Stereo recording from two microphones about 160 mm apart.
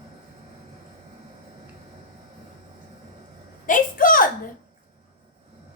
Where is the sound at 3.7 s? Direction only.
60° left (ahead or behind).